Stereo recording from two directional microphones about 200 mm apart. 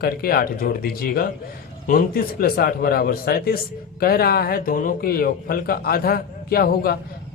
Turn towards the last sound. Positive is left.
turn(degrees=50)  # may be behind; listen again after turning